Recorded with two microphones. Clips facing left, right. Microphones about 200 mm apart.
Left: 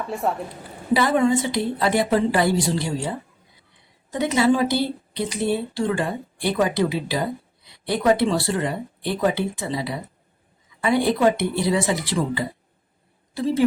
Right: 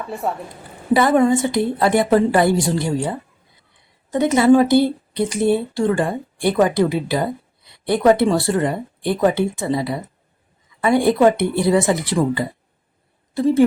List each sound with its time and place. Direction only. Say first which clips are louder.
0.1 s a woman's voice: even; centre (ahead or behind)
0.9 s a woman's voice: right 4 dB; 50° right (ahead or behind)
4.1 s a woman's voice: right 6 dB; 55° right (ahead or behind)
10.8 s a woman's voice: right 4 dB; 50° right (ahead or behind)